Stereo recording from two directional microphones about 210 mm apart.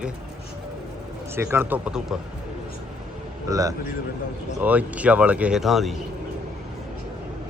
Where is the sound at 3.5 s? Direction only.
15° right (ahead or behind); by 6.0 s centre (ahead or behind).